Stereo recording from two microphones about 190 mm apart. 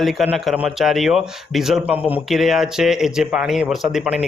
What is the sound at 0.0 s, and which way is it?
A man's voice, centre (ahead or behind).